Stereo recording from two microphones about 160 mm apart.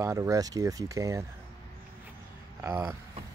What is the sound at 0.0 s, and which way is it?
Speech, 20° right (ahead or behind).